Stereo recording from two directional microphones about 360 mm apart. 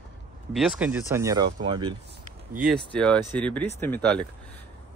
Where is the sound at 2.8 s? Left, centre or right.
Centre.